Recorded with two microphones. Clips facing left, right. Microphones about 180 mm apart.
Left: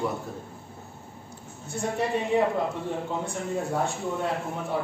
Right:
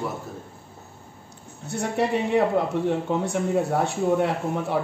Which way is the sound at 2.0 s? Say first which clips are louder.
Right 5 dB; 70° right (ahead or behind).